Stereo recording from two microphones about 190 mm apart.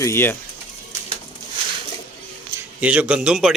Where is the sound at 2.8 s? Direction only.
5° right (ahead or behind).